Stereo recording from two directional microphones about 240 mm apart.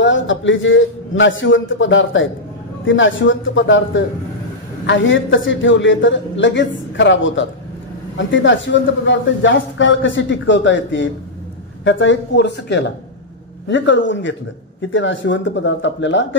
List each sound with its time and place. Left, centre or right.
0.0 s a man's voice: left